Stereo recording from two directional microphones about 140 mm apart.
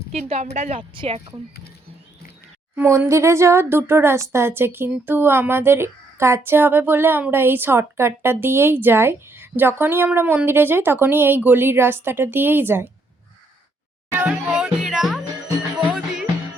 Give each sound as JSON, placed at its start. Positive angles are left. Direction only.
{"t": 0.1, "sound": "a woman's voice", "side_deg": -50}
{"t": 0.8, "sound": "speech", "side_deg": -40}
{"t": 2.7, "sound": "speech", "side_deg": -15}
{"t": 14.1, "sound": "music", "side_deg": -10}